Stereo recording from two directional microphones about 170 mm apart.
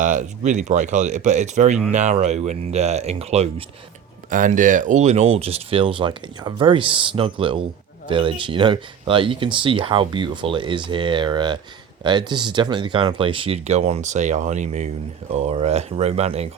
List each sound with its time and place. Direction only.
0.0 s speech: 45° right (ahead or behind)
4.3 s speech: 50° right (ahead or behind)